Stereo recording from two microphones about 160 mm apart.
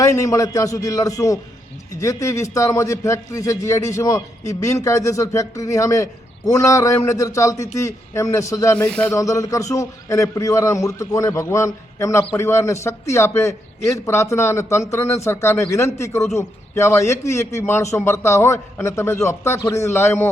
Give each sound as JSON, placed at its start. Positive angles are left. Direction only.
{"t": 0.0, "sound": "a man's voice", "side_deg": 20}
{"t": 8.9, "sound": "a man's voice", "side_deg": 5}
{"t": 9.1, "sound": "a man's voice", "side_deg": 20}